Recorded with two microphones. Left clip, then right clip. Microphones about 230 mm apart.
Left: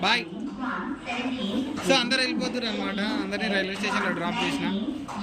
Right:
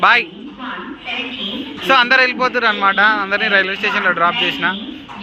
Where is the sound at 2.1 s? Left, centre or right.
Centre.